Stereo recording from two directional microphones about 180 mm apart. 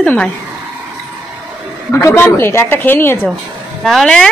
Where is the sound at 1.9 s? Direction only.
15° left (ahead or behind).